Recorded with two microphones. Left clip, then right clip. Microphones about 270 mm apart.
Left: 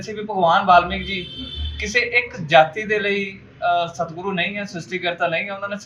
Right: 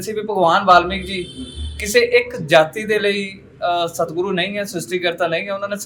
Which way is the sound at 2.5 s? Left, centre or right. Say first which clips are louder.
Even; right.